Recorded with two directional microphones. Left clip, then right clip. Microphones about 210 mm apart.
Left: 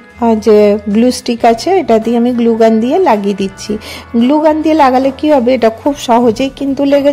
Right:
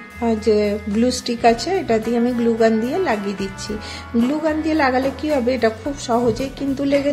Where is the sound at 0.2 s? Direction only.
35° left (ahead or behind).